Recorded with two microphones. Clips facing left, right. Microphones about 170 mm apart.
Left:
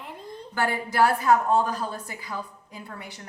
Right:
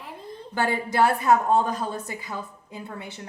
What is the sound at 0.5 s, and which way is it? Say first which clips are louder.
A woman's voice: right 1 dB; 20° right (ahead or behind).